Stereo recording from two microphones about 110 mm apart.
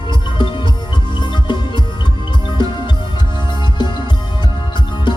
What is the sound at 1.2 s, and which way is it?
Music, 45° left (ahead or behind).